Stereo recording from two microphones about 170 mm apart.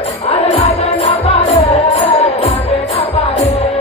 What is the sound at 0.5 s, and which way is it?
Music, 35° left (ahead or behind).